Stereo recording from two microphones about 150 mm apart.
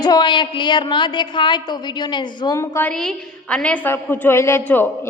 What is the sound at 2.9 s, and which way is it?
A woman's voice, 5° left (ahead or behind).